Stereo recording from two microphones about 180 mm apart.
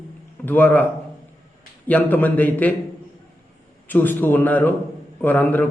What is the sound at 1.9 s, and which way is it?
Speech, 10° left (ahead or behind).